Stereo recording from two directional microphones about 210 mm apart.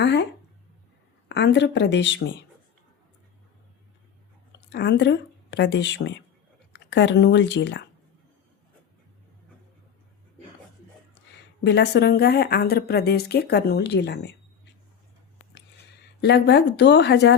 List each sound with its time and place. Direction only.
0.0 s speech: 55° left (ahead or behind)
1.3 s speech: 55° left (ahead or behind)
4.7 s a woman's voice: 55° left (ahead or behind)
11.6 s speech: 55° left (ahead or behind)
16.2 s speech: 55° left (ahead or behind)